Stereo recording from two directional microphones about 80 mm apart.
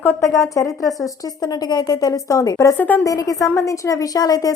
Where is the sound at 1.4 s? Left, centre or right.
Left.